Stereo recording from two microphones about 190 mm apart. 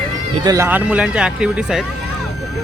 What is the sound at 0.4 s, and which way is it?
Speech, 15° right (ahead or behind).